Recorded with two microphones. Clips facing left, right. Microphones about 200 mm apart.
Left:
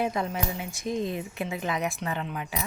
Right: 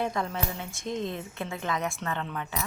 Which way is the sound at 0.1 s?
15° left (ahead or behind).